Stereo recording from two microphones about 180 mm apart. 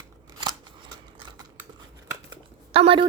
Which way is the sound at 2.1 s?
30° right (ahead or behind).